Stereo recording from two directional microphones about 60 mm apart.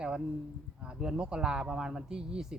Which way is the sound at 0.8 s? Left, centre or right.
Centre.